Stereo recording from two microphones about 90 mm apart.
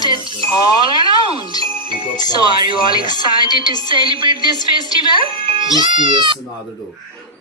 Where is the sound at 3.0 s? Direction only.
50° left (ahead or behind).